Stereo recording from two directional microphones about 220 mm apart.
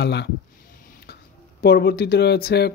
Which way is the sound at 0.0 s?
50° left (ahead or behind).